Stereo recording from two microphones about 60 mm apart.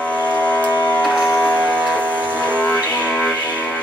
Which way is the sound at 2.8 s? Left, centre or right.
Left.